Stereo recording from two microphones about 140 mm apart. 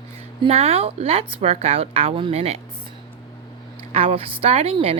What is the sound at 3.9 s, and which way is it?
Speech, 45° right (ahead or behind).